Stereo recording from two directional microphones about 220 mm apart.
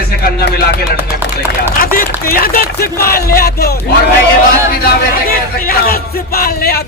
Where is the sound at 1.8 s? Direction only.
40° left (ahead or behind).